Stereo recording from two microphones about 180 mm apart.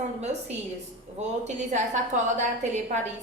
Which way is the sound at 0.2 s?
40° right (ahead or behind).